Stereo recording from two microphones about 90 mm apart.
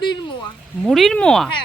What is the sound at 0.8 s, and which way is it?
Speech, centre (ahead or behind).